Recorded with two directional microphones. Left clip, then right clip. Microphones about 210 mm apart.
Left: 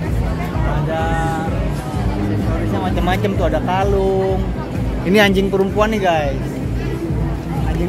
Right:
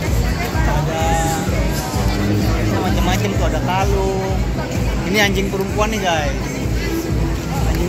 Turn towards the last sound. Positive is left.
turn(degrees=45)  # may be behind; listen again after turning